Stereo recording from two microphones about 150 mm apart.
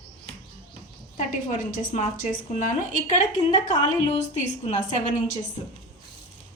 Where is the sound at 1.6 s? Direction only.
65° left (ahead or behind).